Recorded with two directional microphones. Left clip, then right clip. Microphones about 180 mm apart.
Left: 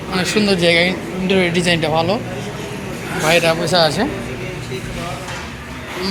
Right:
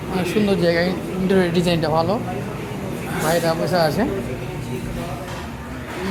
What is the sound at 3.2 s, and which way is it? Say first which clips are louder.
Speech: left 5 dB; 5° left (ahead or behind).